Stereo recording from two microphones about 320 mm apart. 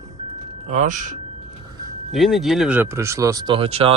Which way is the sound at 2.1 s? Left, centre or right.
Centre.